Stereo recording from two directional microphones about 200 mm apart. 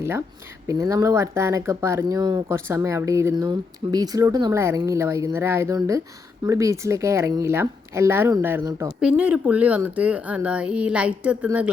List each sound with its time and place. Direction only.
0.0 s speech: 10° right (ahead or behind)